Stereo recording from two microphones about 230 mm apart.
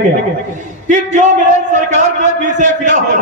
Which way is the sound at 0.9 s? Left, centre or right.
Right.